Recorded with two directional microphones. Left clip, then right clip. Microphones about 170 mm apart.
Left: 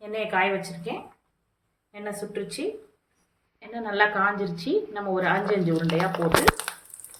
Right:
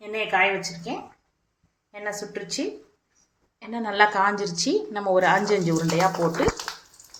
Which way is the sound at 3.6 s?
50° right (ahead or behind).